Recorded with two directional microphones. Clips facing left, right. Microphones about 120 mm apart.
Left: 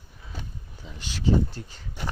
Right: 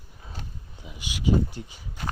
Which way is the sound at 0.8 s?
10° right (ahead or behind).